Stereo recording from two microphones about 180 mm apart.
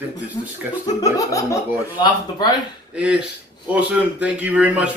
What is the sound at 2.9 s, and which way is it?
A man's voice, 5° right (ahead or behind).